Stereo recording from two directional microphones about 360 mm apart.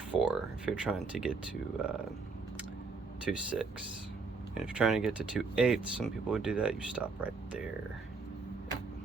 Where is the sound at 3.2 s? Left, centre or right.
Centre.